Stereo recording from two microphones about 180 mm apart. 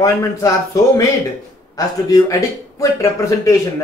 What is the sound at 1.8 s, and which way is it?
A man's voice, 20° left (ahead or behind).